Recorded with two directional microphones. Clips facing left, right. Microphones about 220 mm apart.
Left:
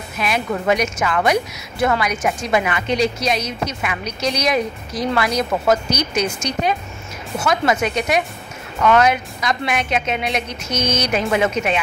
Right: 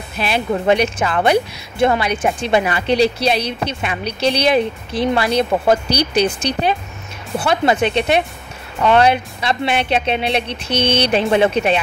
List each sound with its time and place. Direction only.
0.2 s a woman's voice: 30° right (ahead or behind)